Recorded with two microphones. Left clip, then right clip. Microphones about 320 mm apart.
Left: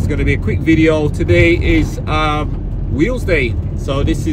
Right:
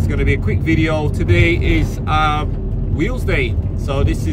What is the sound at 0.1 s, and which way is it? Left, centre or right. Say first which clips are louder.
Speech: left 2 dB; centre.